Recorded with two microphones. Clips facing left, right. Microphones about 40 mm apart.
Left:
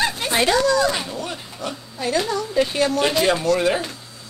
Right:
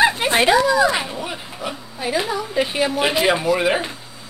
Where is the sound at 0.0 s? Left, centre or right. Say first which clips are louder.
Right 4 dB; right.